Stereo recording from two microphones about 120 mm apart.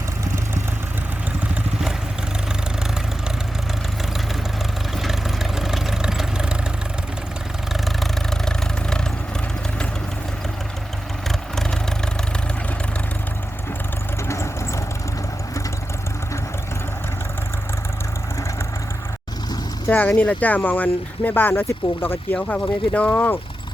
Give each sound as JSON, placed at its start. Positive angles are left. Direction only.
{"t": 5.0, "sound": "vehicle", "side_deg": -5}
{"t": 7.7, "sound": "vehicle", "side_deg": 0}
{"t": 11.3, "sound": "vehicle", "side_deg": 5}
{"t": 14.3, "sound": "vehicle", "side_deg": 25}
{"t": 19.9, "sound": "speech", "side_deg": 15}